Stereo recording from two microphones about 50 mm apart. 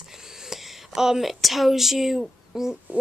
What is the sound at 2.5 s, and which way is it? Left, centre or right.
Hoot, centre.